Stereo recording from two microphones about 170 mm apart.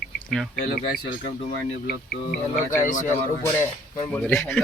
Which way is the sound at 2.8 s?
50° left (ahead or behind).